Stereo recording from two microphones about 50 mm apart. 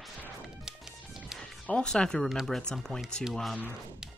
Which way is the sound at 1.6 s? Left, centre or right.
Centre.